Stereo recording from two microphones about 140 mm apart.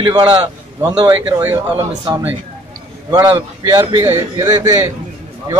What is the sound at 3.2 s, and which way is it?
Speech, 35° right (ahead or behind).